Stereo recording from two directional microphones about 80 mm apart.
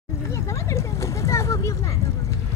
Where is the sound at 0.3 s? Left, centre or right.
Left.